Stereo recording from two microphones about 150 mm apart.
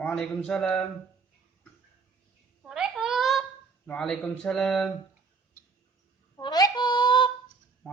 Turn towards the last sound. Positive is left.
turn(degrees=30)  # may be behind; listen again after turning